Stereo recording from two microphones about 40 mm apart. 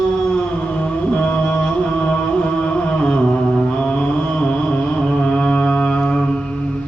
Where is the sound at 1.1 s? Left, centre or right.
Left.